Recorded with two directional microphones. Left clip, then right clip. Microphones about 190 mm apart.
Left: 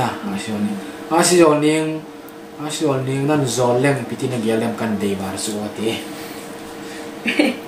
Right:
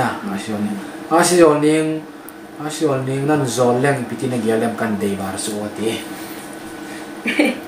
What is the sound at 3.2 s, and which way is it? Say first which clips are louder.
Speech: right 1 dB; 15° left (ahead or behind).